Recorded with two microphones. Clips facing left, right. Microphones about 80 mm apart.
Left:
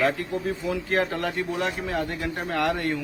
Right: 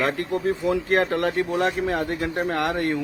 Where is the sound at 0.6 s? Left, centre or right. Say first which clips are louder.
Right 4 dB; right.